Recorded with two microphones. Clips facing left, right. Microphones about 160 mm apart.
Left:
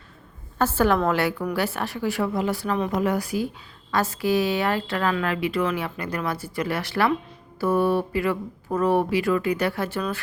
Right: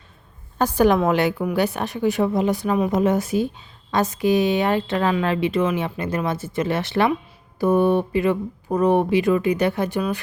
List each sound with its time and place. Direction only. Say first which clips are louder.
0.6 s a woman's voice: right 3 dB; 15° right (ahead or behind)